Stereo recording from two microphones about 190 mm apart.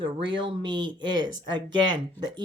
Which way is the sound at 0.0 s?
25° right (ahead or behind).